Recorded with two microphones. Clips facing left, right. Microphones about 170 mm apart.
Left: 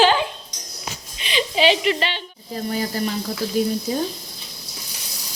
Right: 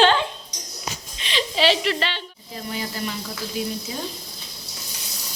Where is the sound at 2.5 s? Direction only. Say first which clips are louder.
Left 6 dB; 40° left (ahead or behind).